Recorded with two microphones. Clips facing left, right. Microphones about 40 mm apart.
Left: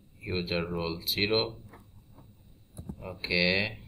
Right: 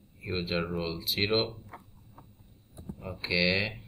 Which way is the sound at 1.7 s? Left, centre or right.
Right.